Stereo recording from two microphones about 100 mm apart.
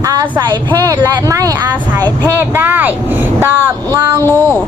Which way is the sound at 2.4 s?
20° right (ahead or behind).